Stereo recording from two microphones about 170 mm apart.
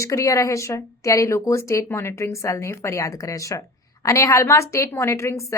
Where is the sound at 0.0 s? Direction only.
20° left (ahead or behind).